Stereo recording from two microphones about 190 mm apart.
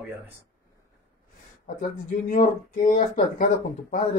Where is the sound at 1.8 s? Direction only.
45° left (ahead or behind).